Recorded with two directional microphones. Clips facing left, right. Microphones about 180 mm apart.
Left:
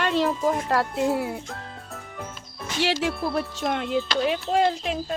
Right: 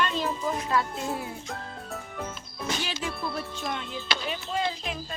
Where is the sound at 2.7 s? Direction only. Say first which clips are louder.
Left 8 dB; 75° left (ahead or behind).